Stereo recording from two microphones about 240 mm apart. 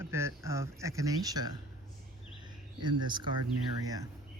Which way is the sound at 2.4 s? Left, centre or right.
Centre.